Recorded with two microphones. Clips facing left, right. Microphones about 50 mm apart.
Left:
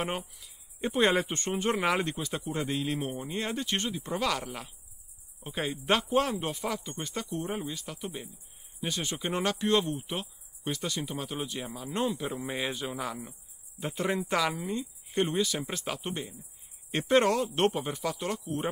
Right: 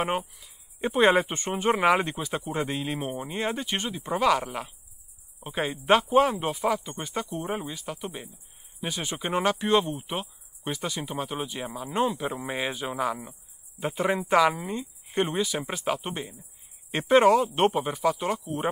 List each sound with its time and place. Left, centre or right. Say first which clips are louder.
0.0 s speech: right 6 dB; centre